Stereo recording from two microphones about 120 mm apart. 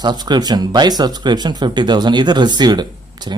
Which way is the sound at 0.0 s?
35° right (ahead or behind).